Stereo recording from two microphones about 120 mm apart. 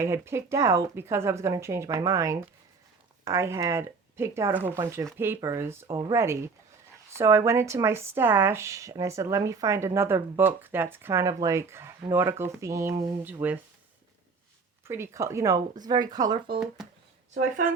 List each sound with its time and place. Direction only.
0.0 s speech: 20° right (ahead or behind)
14.8 s speech: 20° right (ahead or behind)